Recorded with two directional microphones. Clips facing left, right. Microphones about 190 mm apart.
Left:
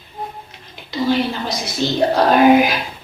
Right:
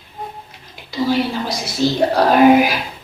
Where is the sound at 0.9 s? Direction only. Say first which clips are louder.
Even; 5° right (ahead or behind).